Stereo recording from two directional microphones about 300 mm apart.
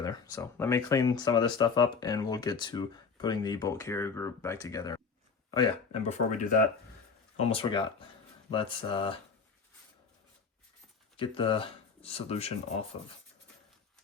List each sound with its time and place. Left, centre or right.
0.0 s speech: centre
11.2 s speech: centre